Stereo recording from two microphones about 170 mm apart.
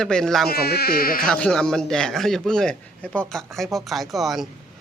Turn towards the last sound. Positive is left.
turn(degrees=0)  # may be behind; listen again after turning